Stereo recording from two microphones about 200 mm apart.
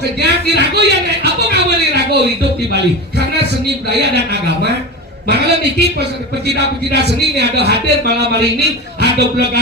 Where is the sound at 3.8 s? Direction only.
55° right (ahead or behind).